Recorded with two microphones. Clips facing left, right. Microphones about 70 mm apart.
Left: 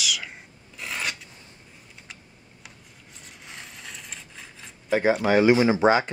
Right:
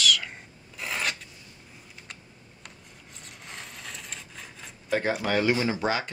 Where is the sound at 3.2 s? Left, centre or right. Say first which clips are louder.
Even; centre.